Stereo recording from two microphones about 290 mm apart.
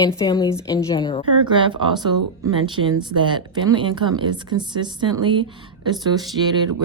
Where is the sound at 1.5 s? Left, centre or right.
Centre.